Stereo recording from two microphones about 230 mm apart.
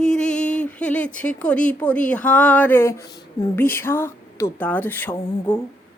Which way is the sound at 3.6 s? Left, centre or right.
Centre.